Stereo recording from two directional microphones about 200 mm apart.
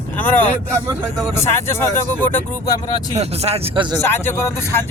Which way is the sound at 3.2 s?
30° right (ahead or behind).